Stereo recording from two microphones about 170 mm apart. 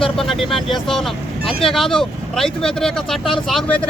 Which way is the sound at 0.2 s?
Centre (ahead or behind).